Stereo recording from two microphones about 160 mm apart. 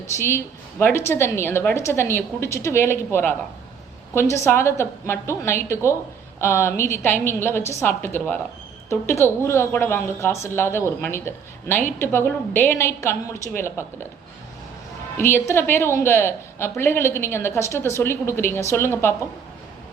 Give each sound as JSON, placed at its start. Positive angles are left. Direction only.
{"t": 0.2, "sound": "a woman's voice", "side_deg": 15}
{"t": 15.2, "sound": "a woman's voice", "side_deg": 15}